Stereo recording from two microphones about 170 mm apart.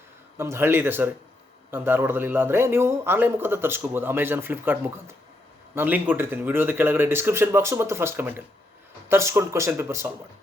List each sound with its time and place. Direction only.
0.3 s a man's voice: 15° right (ahead or behind)